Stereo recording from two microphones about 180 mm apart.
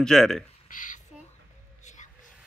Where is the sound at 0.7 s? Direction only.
45° left (ahead or behind).